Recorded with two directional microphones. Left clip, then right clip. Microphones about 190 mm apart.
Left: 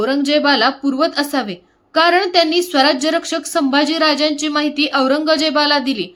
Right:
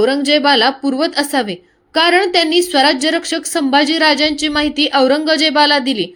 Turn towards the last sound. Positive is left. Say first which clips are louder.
# right 3 dB
turn(degrees=-10)  # may be behind; listen again after turning